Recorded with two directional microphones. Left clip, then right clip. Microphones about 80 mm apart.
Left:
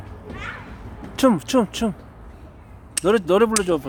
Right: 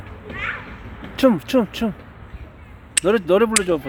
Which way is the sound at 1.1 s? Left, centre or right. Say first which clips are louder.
Right 1 dB; centre.